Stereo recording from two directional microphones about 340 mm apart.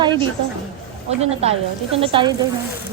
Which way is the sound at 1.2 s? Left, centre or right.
Centre.